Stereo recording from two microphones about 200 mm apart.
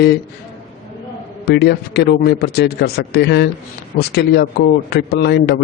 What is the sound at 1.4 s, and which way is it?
A man's voice, 55° left (ahead or behind).